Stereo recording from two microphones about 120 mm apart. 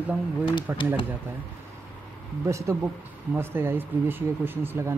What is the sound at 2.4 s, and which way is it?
Speech, 25° right (ahead or behind).